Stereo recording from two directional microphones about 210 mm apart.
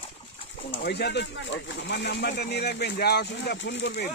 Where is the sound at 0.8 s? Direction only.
55° left (ahead or behind).